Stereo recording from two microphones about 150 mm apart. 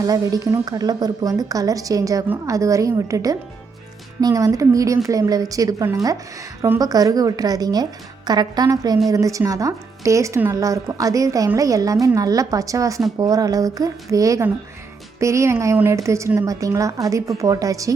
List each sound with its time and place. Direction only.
0.0 s speech: 25° right (ahead or behind)